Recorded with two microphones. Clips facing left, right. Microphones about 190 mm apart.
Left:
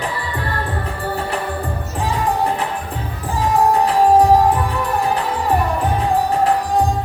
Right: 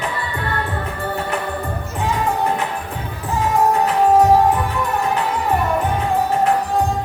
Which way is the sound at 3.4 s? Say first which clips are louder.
Left 1 dB; 35° left (ahead or behind).